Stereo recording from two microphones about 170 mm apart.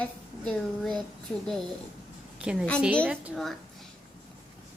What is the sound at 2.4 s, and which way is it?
Speech, 5° right (ahead or behind).